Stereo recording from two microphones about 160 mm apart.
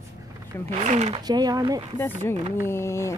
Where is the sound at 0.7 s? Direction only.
45° right (ahead or behind).